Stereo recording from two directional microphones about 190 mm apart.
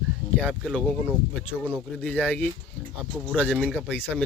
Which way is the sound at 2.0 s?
5° left (ahead or behind).